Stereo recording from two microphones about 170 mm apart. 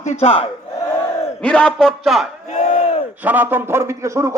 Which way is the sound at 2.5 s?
40° left (ahead or behind).